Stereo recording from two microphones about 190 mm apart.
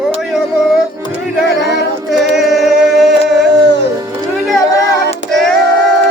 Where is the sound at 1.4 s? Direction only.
60° left (ahead or behind).